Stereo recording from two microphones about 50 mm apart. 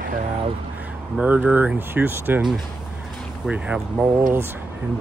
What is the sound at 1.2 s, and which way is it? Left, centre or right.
Speech, right.